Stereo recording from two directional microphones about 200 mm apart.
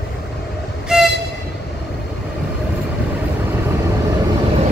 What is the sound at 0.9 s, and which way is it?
Train, 5° right (ahead or behind).